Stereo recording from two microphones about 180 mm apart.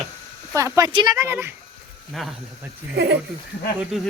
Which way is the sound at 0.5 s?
20° right (ahead or behind).